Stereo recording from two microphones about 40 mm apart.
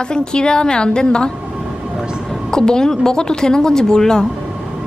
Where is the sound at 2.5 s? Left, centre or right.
Centre.